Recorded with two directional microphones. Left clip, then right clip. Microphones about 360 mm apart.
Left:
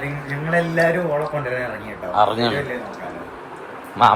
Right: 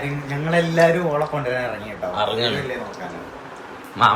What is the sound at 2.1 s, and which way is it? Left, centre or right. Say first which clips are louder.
Speech: left 5 dB; centre.